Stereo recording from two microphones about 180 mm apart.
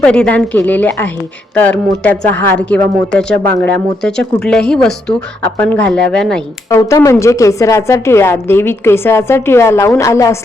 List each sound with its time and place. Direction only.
0.0 s speech: 5° left (ahead or behind)
6.7 s speech: 20° left (ahead or behind)